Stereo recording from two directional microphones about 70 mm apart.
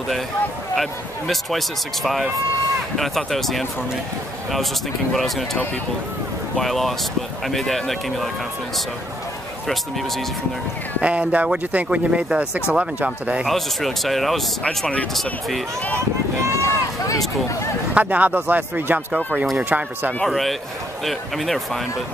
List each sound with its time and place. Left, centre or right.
0.7 s speech: centre
5.1 s speech: centre
9.7 s speech: centre
11.0 s speech: centre
13.5 s speech: centre
16.3 s speech: right
16.6 s run: left
17.9 s speech: right
20.2 s speech: centre